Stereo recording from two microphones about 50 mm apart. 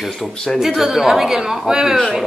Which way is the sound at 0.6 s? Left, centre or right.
Centre.